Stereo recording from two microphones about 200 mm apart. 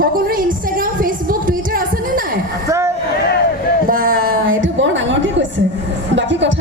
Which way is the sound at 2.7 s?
15° right (ahead or behind).